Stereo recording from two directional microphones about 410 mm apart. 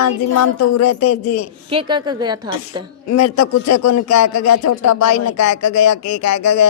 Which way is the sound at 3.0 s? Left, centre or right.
Left.